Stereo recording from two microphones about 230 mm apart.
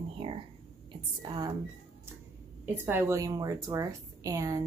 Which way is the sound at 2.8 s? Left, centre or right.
Centre.